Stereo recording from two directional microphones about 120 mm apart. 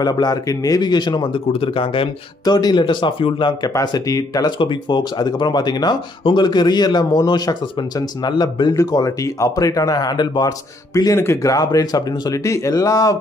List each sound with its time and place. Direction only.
0.0 s speech: 35° left (ahead or behind)
11.1 s speech: 25° left (ahead or behind)